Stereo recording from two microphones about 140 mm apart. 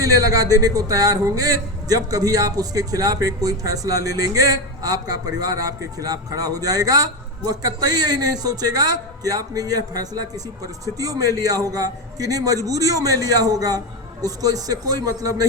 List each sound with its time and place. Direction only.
0.0 s speech: 25° right (ahead or behind)